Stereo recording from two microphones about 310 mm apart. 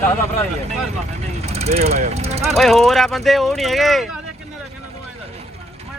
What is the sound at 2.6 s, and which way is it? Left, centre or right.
Speech, centre.